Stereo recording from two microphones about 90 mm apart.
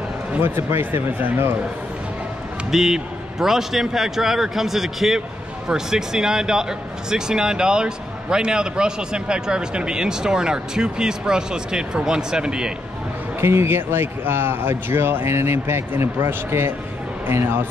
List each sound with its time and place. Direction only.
0.4 s a man's voice: 25° right (ahead or behind)
2.7 s a man's voice: 5° right (ahead or behind)
13.4 s a man's voice: 30° right (ahead or behind)